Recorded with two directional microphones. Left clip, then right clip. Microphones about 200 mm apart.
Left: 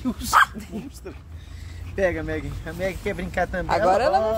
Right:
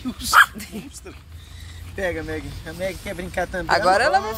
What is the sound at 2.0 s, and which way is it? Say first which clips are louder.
Speech: left 2 dB; 45° left (ahead or behind).